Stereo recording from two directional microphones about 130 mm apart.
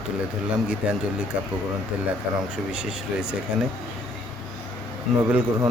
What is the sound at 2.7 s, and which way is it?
Speech, 5° right (ahead or behind).